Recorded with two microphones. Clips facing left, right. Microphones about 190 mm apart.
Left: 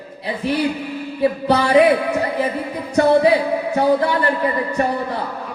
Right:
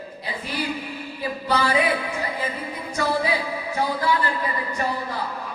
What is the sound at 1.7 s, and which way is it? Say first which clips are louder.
Speech: left 10 dB; 60° left (ahead or behind).